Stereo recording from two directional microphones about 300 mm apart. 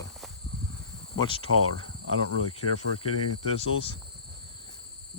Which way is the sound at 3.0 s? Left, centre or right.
Left.